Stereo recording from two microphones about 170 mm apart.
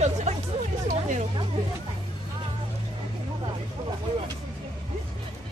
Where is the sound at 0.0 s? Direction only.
40° right (ahead or behind).